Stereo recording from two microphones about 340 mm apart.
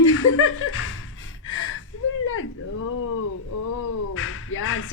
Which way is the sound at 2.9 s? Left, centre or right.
Left.